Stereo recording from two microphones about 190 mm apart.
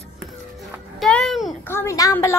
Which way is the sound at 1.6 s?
15° left (ahead or behind).